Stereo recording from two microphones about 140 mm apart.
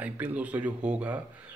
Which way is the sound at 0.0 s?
10° right (ahead or behind).